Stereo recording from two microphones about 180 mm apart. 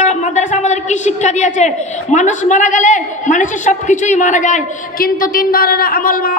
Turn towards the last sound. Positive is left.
turn(degrees=50)  # may be behind; listen again after turning